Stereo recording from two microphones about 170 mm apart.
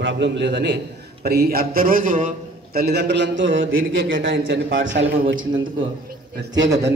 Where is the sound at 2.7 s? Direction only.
70° right (ahead or behind); by 5.4 s 90° right.